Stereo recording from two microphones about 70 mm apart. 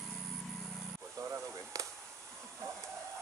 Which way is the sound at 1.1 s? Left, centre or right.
Right.